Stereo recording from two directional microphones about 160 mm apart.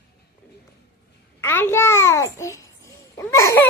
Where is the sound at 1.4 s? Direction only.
15° left (ahead or behind).